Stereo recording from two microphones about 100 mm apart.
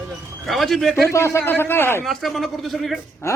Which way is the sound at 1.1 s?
25° left (ahead or behind).